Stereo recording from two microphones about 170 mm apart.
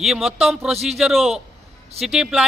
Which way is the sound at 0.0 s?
Centre (ahead or behind).